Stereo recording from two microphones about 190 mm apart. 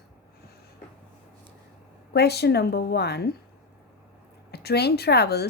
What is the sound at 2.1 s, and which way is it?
A woman's voice, 60° left (ahead or behind).